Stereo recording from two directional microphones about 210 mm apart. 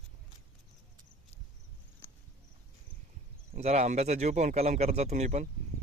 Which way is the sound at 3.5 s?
30° right (ahead or behind).